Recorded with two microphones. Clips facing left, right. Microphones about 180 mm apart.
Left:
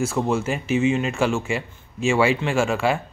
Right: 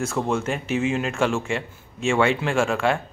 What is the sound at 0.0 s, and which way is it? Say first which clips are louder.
Speech: left 2 dB; 5° left (ahead or behind).